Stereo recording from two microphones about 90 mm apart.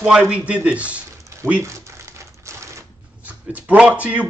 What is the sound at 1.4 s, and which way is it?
Speech, 35° right (ahead or behind).